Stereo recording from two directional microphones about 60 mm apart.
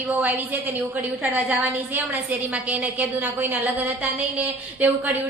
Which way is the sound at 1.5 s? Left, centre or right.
Right.